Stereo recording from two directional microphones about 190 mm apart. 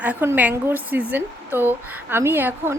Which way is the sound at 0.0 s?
10° right (ahead or behind).